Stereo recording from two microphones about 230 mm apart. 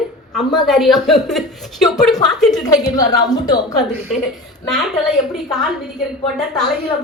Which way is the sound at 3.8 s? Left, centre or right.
Centre.